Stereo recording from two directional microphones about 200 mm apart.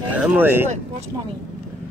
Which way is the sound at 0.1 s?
10° right (ahead or behind).